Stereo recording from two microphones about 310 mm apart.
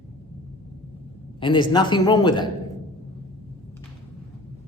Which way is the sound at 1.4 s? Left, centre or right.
Centre.